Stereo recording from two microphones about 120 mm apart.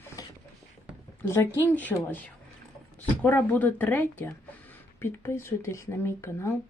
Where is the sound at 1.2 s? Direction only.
20° left (ahead or behind).